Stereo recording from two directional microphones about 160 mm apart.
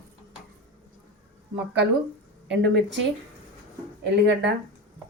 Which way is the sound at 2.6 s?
90° right.